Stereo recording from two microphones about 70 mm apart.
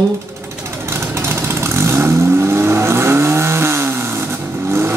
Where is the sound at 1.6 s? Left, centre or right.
Right.